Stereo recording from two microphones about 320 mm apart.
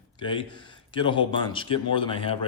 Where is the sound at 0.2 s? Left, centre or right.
Centre.